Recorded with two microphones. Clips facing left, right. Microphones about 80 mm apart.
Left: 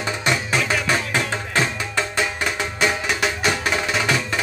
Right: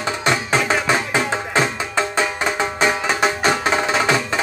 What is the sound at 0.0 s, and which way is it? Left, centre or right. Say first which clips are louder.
Music: right 3 dB; right.